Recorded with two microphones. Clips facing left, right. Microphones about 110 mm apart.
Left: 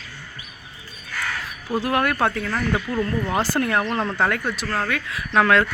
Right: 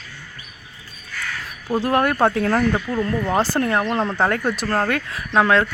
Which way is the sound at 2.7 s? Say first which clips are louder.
Right 1 dB; 20° right (ahead or behind).